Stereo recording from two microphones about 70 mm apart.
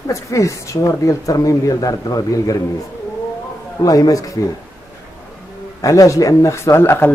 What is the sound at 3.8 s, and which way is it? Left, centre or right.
Speech, left.